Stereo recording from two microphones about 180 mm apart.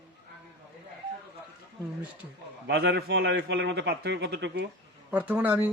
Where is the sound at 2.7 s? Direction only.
65° right (ahead or behind).